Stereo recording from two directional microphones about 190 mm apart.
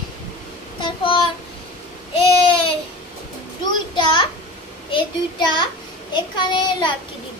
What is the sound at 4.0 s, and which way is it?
A child's voice, 25° left (ahead or behind).